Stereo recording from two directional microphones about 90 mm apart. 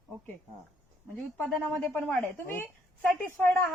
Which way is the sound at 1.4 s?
15° left (ahead or behind).